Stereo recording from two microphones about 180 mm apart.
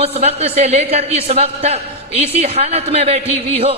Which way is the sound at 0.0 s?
35° right (ahead or behind).